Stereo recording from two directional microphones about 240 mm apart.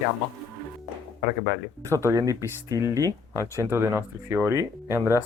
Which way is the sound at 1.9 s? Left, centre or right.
Centre.